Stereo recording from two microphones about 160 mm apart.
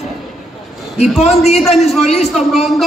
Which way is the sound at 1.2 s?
45° left (ahead or behind).